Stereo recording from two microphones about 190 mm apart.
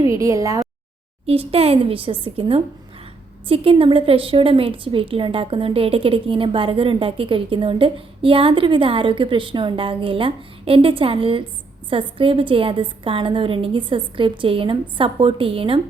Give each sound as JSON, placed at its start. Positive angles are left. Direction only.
{"t": 0.0, "sound": "a woman's voice", "side_deg": -15}
{"t": 1.3, "sound": "a woman's voice", "side_deg": -30}